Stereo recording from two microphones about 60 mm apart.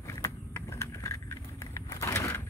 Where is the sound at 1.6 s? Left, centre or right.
Left.